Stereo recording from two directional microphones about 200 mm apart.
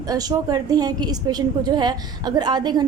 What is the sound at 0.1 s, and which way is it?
A woman's voice, 20° right (ahead or behind).